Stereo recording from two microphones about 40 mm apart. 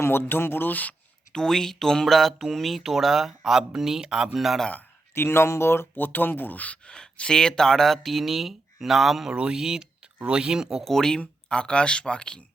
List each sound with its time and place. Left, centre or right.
0.0 s speech: left
1.3 s speech: centre
4.4 s speech: centre
5.1 s speech: left
6.0 s speech: left
6.8 s speech: left; by 9.3 s centre
9.3 s speech: right
10.2 s speech: right
10.4 s speech: centre
10.8 s speech: centre
11.4 s speech: left